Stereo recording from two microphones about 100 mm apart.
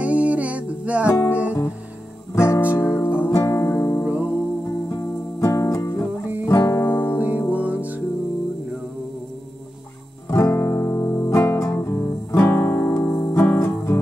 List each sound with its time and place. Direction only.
0.0 s music: 15° right (ahead or behind)
1.0 s music: 25° left (ahead or behind)
2.3 s guitar: 25° left (ahead or behind)
3.3 s music: 30° left (ahead or behind)
4.0 s music: 15° right (ahead or behind)
4.6 s music: 30° left (ahead or behind)
7.2 s music: 15° right (ahead or behind)
10.3 s music: 30° left (ahead or behind)